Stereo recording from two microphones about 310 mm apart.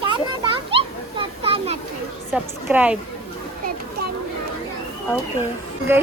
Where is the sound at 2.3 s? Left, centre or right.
Centre.